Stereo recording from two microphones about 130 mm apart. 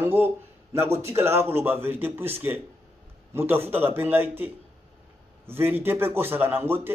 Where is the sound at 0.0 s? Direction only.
15° right (ahead or behind).